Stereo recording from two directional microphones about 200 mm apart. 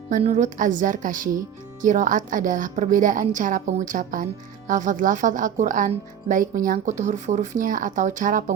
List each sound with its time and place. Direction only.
0.1 s speech: 35° right (ahead or behind)